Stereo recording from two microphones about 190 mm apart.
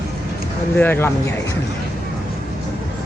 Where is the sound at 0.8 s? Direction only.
10° left (ahead or behind).